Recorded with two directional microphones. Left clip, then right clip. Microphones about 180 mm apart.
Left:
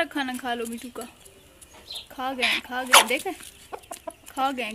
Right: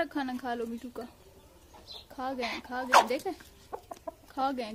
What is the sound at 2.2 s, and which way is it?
Speech, centre (ahead or behind).